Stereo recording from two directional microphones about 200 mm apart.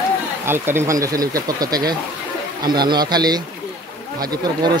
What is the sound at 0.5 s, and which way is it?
Speech, 10° right (ahead or behind).